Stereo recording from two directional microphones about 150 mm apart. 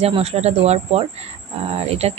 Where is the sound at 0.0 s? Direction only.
45° right (ahead or behind).